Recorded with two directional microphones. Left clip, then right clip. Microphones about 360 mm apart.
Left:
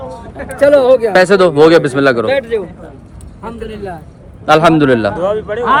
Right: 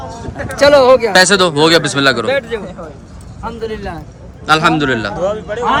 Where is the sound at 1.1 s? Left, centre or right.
Centre.